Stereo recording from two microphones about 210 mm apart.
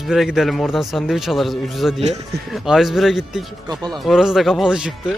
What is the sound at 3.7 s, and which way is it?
Speech, 20° right (ahead or behind).